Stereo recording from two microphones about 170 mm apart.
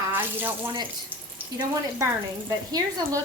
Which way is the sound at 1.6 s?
20° right (ahead or behind).